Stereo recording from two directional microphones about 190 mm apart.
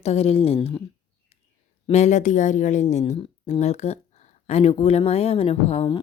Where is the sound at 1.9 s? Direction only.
40° left (ahead or behind).